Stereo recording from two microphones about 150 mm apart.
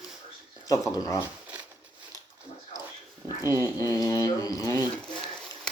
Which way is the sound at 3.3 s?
25° left (ahead or behind).